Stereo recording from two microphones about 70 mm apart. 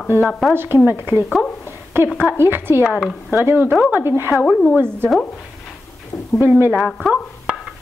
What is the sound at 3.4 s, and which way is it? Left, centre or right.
Speech, right.